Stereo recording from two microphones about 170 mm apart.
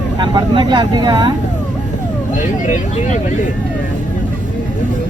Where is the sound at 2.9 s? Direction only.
45° left (ahead or behind).